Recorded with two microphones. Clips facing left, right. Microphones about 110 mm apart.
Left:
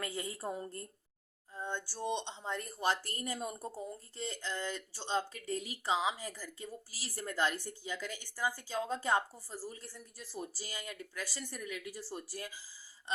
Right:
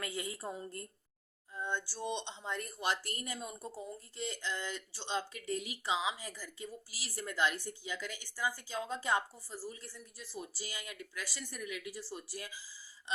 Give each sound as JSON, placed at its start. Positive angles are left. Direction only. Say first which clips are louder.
{"t": 0.0, "sound": "speech", "louder": "left 1 dB", "side_deg": 35}